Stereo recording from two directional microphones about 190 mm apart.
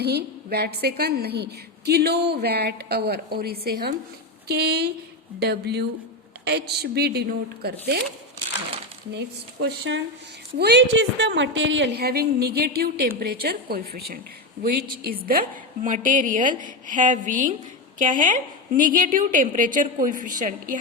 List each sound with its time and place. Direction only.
0.0 s a woman's voice: 60° right (ahead or behind)
9.1 s a woman's voice: 60° right (ahead or behind); by 20.7 s 45° right (ahead or behind)